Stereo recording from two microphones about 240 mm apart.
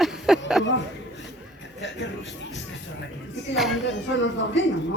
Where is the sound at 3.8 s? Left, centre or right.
Left.